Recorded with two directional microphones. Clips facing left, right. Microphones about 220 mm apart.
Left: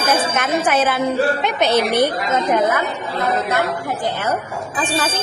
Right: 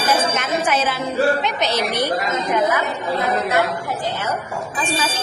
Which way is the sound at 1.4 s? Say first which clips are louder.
Left 4 dB; 55° left (ahead or behind).